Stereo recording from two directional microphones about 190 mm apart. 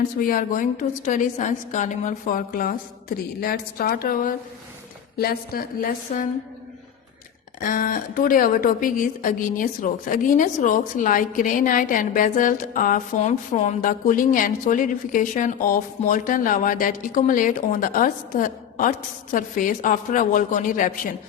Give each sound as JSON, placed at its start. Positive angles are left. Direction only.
{"t": 0.2, "sound": "a woman's voice", "side_deg": 50}
{"t": 7.6, "sound": "a woman's voice", "side_deg": 45}